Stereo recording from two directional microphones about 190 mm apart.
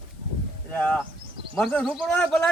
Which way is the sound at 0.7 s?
5° left (ahead or behind).